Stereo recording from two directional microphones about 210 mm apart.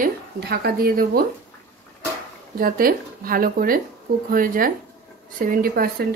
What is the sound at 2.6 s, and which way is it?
A woman's voice, 45° right (ahead or behind).